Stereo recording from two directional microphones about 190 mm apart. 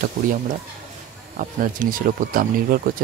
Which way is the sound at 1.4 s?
45° right (ahead or behind).